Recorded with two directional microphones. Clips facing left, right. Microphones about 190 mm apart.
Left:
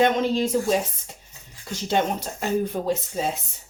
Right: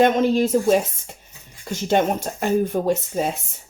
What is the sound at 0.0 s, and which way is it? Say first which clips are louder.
Speech: right 4 dB; 45° right (ahead or behind).